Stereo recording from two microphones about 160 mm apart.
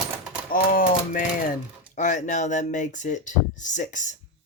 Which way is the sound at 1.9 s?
55° left (ahead or behind).